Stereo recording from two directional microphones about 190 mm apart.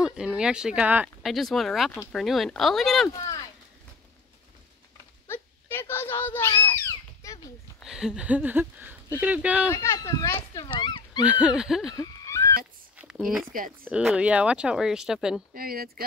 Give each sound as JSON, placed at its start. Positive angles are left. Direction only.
{"t": 0.0, "sound": "speech", "side_deg": -5}
{"t": 3.1, "sound": "speech", "side_deg": 20}
{"t": 5.3, "sound": "a sound", "side_deg": 10}
{"t": 7.8, "sound": "a sound", "side_deg": -5}
{"t": 9.2, "sound": "speech", "side_deg": -5}
{"t": 9.7, "sound": "speech", "side_deg": 15}
{"t": 11.2, "sound": "speech", "side_deg": -5}
{"t": 11.9, "sound": "horse", "side_deg": 15}
{"t": 13.0, "sound": "a sound", "side_deg": -5}
{"t": 13.5, "sound": "speech", "side_deg": -45}
{"t": 13.8, "sound": "speech", "side_deg": -5}
{"t": 15.5, "sound": "speech", "side_deg": -50}